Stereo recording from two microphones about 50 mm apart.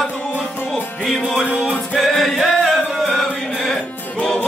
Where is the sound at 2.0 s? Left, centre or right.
Centre.